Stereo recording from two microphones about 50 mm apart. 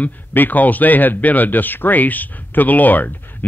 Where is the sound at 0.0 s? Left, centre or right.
Left.